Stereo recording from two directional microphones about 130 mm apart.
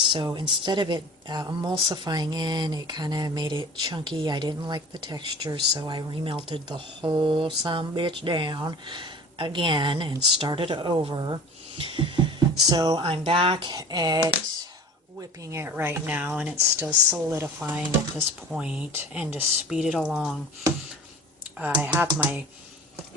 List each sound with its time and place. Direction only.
0.0 s speech: 40° right (ahead or behind)
13.0 s speech: 45° right (ahead or behind)
15.2 s speech: 20° right (ahead or behind)
16.6 s speech: 25° right (ahead or behind); by 20.4 s centre (ahead or behind)
21.6 s speech: 15° right (ahead or behind)